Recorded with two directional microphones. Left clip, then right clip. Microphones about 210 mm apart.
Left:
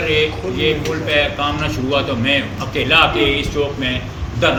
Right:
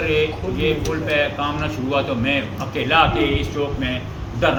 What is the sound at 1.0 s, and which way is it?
A man's voice, 5° right (ahead or behind).